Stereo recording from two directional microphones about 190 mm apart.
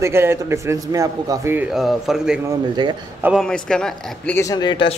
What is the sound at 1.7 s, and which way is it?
Speech, centre (ahead or behind).